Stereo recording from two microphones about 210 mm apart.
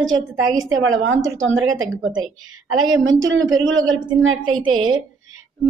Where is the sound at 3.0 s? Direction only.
65° right (ahead or behind).